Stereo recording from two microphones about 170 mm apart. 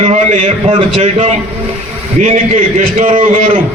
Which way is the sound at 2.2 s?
45° right (ahead or behind).